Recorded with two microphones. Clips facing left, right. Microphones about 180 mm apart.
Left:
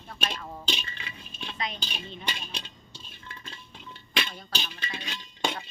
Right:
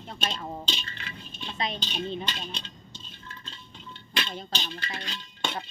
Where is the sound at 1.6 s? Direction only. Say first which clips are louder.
Right 3 dB; 25° right (ahead or behind).